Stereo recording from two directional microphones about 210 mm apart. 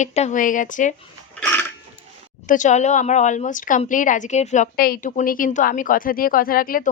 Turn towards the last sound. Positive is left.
turn(degrees=40)  # may be behind; listen again after turning